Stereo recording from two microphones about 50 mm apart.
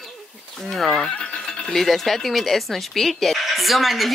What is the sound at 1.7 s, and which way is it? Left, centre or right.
Speech, centre.